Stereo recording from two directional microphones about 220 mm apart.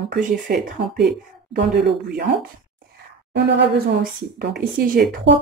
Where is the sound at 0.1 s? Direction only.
45° right (ahead or behind).